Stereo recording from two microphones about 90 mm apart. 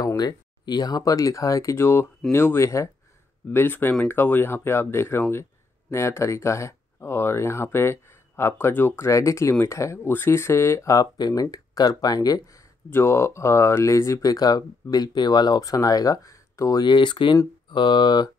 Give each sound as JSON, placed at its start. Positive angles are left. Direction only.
{"t": 0.0, "sound": "speech", "side_deg": 45}
{"t": 12.9, "sound": "speech", "side_deg": 30}
{"t": 16.8, "sound": "speech", "side_deg": 60}